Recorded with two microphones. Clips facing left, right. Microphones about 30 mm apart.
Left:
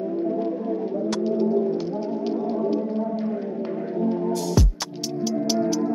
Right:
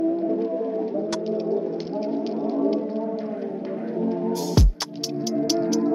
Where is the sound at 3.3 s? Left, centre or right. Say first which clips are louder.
Left 2 dB; centre.